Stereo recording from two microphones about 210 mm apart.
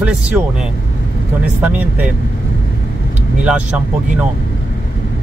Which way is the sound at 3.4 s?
5° right (ahead or behind).